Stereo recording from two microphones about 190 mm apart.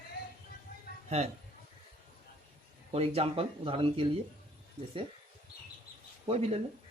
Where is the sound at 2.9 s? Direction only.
30° right (ahead or behind).